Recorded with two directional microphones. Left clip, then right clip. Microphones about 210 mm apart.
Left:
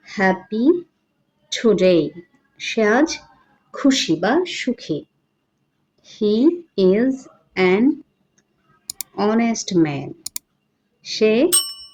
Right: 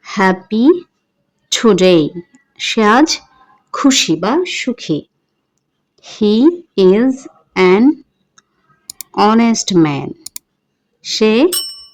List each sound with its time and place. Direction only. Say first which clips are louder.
0.0 s a woman's voice: right 5 dB; 45° right (ahead or behind)
9.1 s speech: right 8 dB; 40° right (ahead or behind)
11.4 s speech: right 4 dB; centre (ahead or behind)